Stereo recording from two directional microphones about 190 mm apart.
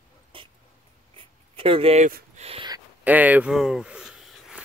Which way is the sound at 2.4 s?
25° right (ahead or behind).